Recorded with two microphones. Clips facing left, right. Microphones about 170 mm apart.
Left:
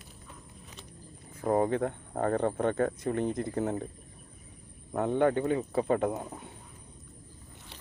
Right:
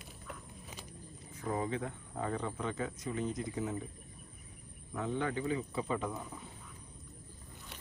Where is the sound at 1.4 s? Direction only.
55° left (ahead or behind).